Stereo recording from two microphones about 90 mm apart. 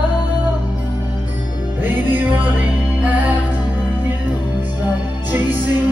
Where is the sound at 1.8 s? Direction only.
20° right (ahead or behind).